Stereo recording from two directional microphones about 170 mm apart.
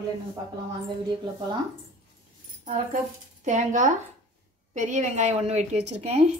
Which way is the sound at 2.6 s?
50° right (ahead or behind).